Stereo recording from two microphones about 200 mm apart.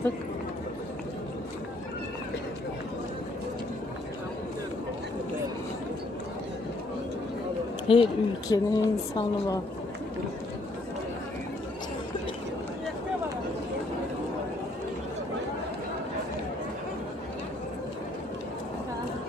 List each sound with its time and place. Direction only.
7.9 s a woman's voice: 25° left (ahead or behind)